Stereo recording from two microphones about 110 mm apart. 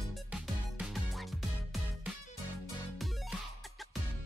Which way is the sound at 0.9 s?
Centre (ahead or behind).